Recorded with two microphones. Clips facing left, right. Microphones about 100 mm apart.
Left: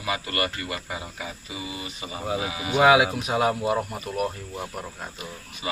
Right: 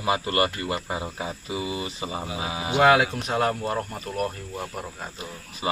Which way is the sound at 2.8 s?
5° left (ahead or behind).